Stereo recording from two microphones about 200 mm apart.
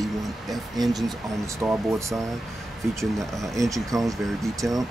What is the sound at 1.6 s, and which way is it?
Speech, 15° right (ahead or behind).